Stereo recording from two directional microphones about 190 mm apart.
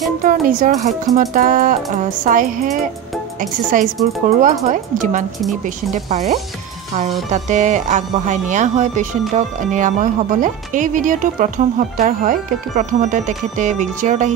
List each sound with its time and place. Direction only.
0.2 s speech: 45° right (ahead or behind)